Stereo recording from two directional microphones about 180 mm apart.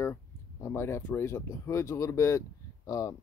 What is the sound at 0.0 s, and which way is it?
Speech, 15° left (ahead or behind).